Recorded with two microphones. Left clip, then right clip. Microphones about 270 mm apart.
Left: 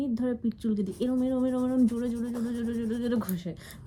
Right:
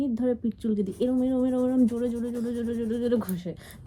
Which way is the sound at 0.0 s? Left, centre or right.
Centre.